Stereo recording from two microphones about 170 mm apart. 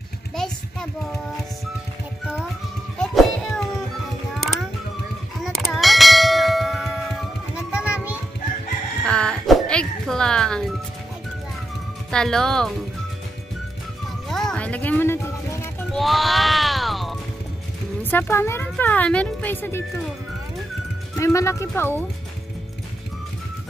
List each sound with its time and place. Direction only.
3.0 s music: 5° left (ahead or behind)
4.4 s mechanisms: centre (ahead or behind)
5.4 s bell: centre (ahead or behind)
9.0 s music: 5° left (ahead or behind)
12.1 s speech: 5° left (ahead or behind)
14.3 s a sound: 5° left (ahead or behind)
15.9 s music: centre (ahead or behind)
18.1 s speech: 15° left (ahead or behind)
21.2 s speech: 15° left (ahead or behind)